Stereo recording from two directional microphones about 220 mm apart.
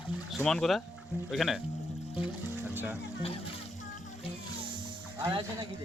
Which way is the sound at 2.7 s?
10° right (ahead or behind).